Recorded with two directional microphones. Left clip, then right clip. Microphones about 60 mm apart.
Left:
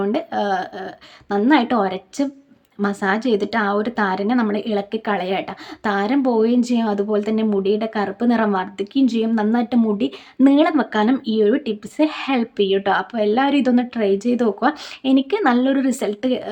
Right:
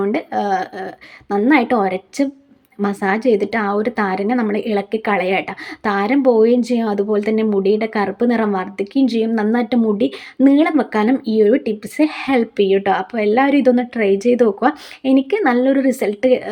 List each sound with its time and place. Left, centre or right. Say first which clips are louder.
0.0 s a woman's voice: right 2 dB; right
3.2 s a woman's voice: right 3 dB; right
10.4 s speech: right 1 dB; right
11.3 s a woman's voice: right 4 dB; right